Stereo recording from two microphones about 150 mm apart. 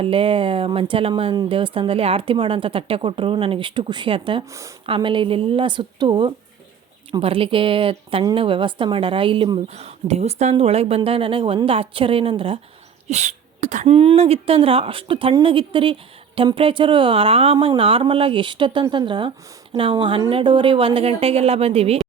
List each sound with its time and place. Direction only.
0.0 s speech: 35° right (ahead or behind)
13.1 s speech: 50° right (ahead or behind)